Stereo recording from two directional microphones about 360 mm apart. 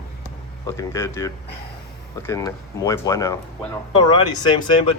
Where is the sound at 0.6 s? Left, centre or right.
Centre.